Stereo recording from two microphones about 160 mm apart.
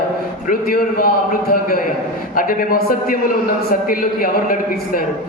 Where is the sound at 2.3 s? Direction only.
65° left (ahead or behind).